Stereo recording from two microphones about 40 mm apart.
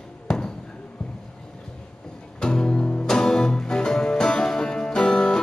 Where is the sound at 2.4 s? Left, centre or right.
Centre.